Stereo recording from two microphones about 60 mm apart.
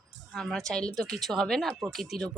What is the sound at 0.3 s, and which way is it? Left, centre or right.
Speech, centre.